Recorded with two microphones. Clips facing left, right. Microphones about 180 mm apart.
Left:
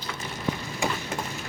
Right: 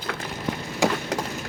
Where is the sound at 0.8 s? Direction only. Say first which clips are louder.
Right 6 dB; 90° right.